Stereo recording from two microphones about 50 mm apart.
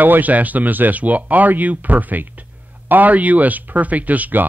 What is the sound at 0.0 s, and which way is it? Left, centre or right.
A man's voice, right.